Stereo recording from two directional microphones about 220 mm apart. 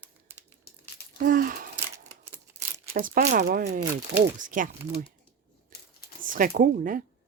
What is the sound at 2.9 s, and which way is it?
Speech, 40° right (ahead or behind).